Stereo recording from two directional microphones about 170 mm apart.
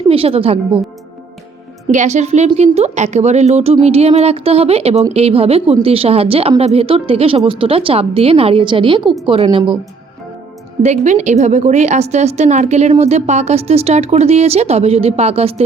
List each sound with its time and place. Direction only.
0.1 s a woman's voice: 35° right (ahead or behind)
1.9 s a woman's voice: 45° right (ahead or behind)
10.8 s a woman's voice: 40° right (ahead or behind)